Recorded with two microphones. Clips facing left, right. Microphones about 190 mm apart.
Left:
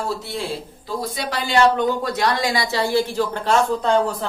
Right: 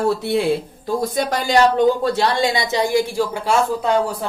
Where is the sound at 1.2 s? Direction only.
45° right (ahead or behind).